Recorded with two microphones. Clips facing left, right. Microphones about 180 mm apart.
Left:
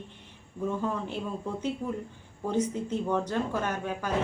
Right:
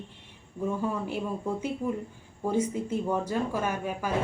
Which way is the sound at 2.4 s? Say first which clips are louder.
Right 1 dB; 10° right (ahead or behind).